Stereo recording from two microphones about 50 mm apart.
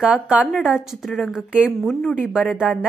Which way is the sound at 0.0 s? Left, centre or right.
Right.